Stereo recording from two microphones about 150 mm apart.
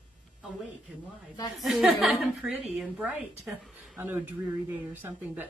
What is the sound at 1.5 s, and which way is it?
A woman's voice, centre (ahead or behind).